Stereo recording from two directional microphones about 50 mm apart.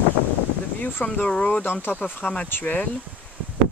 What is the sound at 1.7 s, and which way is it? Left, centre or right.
Speech, left.